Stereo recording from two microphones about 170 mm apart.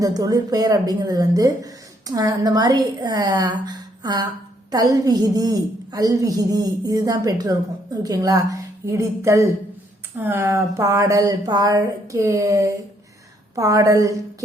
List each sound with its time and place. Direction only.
0.0 s a woman's voice: 20° right (ahead or behind)